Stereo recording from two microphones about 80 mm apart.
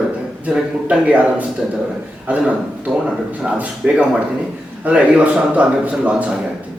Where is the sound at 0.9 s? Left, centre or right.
Centre.